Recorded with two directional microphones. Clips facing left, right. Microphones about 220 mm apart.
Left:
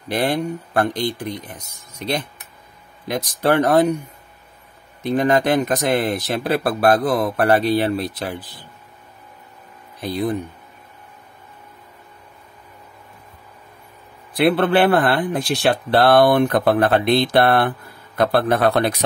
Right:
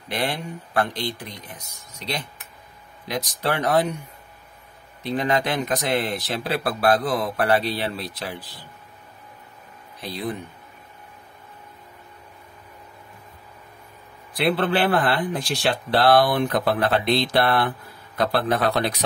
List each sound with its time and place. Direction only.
0.1 s speech: 40° left (ahead or behind)
2.0 s speech: 55° left (ahead or behind)
5.0 s speech: 50° left (ahead or behind)
9.9 s speech: 50° left (ahead or behind)
14.3 s speech: 55° left (ahead or behind)